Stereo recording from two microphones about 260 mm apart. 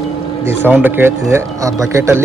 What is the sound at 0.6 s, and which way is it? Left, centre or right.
Speech, centre.